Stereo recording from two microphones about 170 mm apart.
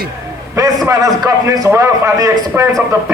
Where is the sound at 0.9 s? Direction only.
20° right (ahead or behind).